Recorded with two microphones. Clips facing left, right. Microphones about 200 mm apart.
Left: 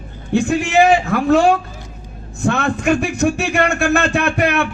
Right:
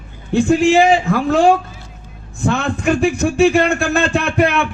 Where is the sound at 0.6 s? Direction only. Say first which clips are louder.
Right 2 dB; 60° left (ahead or behind).